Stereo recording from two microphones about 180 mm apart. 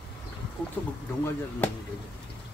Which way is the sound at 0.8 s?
10° left (ahead or behind).